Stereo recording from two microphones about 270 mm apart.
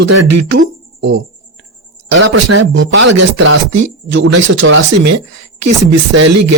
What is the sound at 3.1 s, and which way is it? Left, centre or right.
Speech, right.